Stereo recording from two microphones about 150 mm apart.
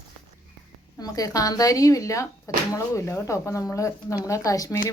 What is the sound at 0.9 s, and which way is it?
Speech, 25° left (ahead or behind).